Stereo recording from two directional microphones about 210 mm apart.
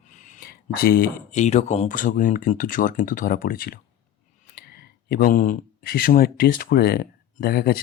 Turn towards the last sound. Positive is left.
turn(degrees=45)  # may be behind; listen again after turning